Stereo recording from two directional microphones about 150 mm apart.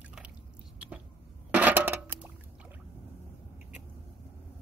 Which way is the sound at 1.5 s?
10° right (ahead or behind).